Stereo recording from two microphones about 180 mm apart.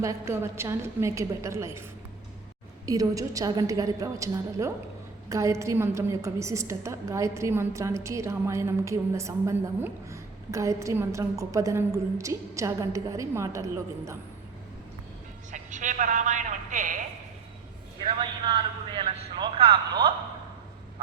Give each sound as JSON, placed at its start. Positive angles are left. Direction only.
{"t": 0.0, "sound": "a woman's voice", "side_deg": -15}
{"t": 2.8, "sound": "a woman's voice", "side_deg": -20}
{"t": 15.5, "sound": "a man's voice", "side_deg": -45}
{"t": 18.0, "sound": "a man's voice", "side_deg": -25}